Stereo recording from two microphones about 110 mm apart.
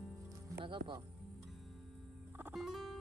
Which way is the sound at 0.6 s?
50° right (ahead or behind).